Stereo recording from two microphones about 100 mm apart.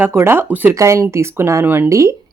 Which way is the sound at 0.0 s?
25° right (ahead or behind).